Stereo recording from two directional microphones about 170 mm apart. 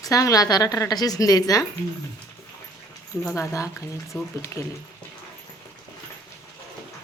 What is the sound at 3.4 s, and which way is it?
Speech, 20° left (ahead or behind).